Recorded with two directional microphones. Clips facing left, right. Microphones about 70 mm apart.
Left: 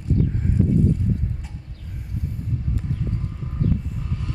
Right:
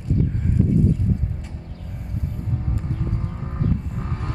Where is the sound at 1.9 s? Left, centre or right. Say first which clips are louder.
Even; right.